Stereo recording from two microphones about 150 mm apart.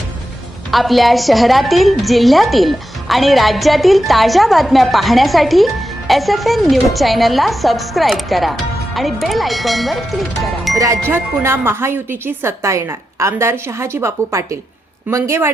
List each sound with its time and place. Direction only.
0.7 s a woman's voice: centre (ahead or behind)
11.1 s a woman's voice: 15° right (ahead or behind)